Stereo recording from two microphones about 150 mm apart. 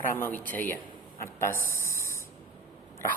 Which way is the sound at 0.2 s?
10° left (ahead or behind).